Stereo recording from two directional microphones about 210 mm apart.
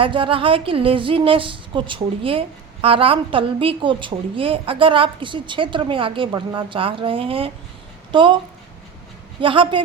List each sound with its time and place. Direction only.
0.0 s a woman's voice: 25° right (ahead or behind)
9.4 s a woman's voice: 25° right (ahead or behind)